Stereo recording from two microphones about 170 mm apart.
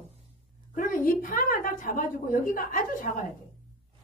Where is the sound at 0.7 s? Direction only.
55° left (ahead or behind).